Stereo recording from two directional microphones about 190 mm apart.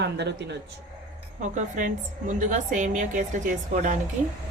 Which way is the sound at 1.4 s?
40° right (ahead or behind).